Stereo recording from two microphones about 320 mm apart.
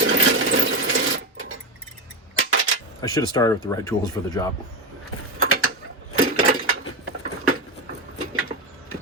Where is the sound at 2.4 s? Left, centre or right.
Right.